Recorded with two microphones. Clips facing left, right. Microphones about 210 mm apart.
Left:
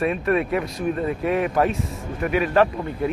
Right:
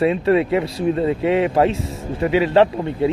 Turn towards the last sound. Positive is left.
turn(degrees=-25)  # may be behind; listen again after turning